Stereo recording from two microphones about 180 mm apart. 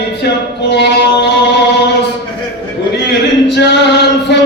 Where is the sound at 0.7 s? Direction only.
70° left (ahead or behind).